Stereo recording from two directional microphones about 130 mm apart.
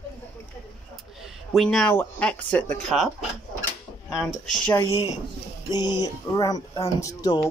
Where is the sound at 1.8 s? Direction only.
15° left (ahead or behind).